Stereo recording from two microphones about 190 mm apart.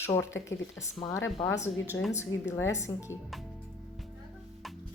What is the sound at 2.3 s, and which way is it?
Speech, 90° left.